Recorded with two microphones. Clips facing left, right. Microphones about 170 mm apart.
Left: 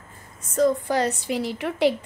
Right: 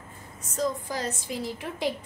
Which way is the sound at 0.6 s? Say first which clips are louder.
Left 9 dB; 65° left (ahead or behind).